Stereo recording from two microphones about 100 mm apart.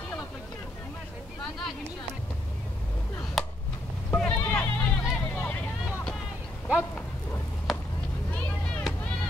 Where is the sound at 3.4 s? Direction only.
Centre (ahead or behind).